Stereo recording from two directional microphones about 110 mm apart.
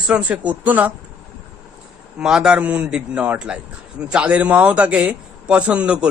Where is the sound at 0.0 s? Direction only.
10° right (ahead or behind).